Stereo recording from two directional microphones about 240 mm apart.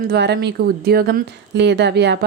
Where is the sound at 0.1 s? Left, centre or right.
Right.